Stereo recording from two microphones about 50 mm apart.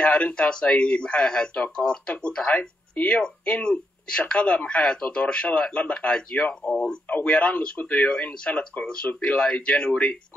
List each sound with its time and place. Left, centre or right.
0.0 s speech: left
6.7 s speech: centre
7.1 s speech: left
8.5 s speech: left